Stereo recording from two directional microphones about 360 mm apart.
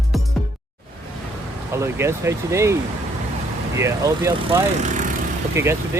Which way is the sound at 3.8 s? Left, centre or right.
Centre.